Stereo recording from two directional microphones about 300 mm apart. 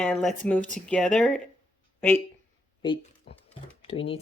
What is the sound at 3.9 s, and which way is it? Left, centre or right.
Speech, centre.